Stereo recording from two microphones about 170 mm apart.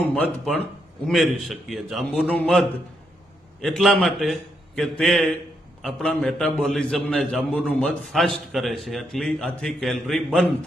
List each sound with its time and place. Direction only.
0.1 s a man's voice: 5° left (ahead or behind)